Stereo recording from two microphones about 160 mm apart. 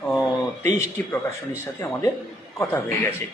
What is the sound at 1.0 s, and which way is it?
A man's voice, 10° left (ahead or behind).